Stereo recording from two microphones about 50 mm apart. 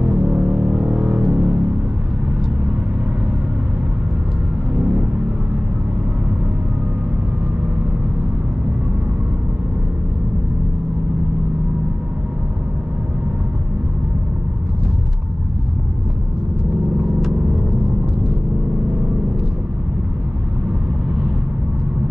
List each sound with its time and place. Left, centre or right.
0.1 s music: right